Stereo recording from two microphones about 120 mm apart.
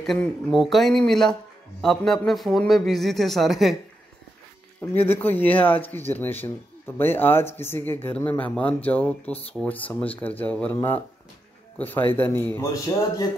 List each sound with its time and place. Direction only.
0.0 s a man's voice: centre (ahead or behind)
5.0 s speech: 15° left (ahead or behind)